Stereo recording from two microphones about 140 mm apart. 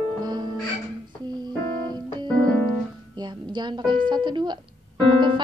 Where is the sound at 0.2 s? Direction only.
30° right (ahead or behind).